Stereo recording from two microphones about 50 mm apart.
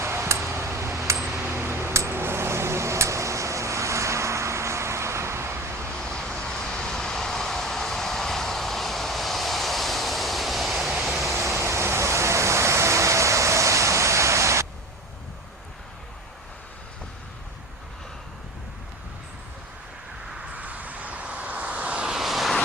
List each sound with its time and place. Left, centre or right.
0.0 s a sound: right
1.4 s a sound: right
6.0 s vehicle: centre
11.3 s vehicle: right
20.4 s vehicle: right
22.1 s vehicle: centre